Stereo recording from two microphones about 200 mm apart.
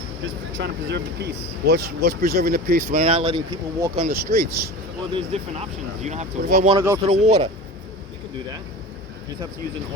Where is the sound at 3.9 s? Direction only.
40° right (ahead or behind).